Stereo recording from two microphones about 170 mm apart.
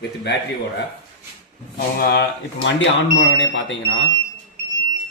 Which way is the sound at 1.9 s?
65° left (ahead or behind).